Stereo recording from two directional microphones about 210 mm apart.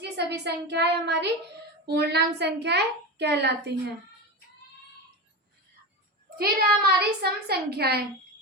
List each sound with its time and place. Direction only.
0.0 s a child's voice: 55° right (ahead or behind)
6.3 s a child's voice: 45° right (ahead or behind)